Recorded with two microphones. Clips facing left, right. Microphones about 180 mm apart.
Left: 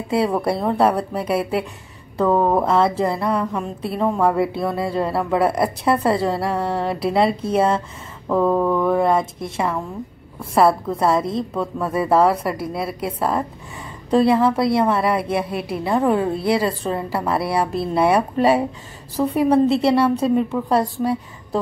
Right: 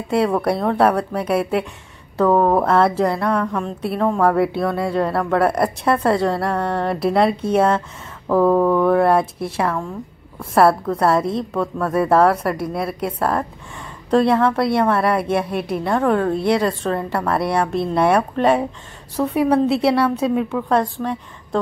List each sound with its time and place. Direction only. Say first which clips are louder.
0.1 s a woman's voice: right 2 dB; centre (ahead or behind)